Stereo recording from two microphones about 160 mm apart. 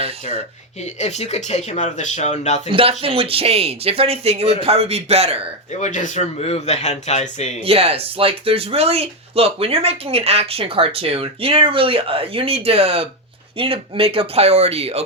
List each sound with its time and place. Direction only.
0.0 s speech: 40° right (ahead or behind)
0.9 s speech: 45° left (ahead or behind)
2.6 s speech: 35° right (ahead or behind)
5.8 s speech: 50° left (ahead or behind)
7.6 s speech: 40° right (ahead or behind)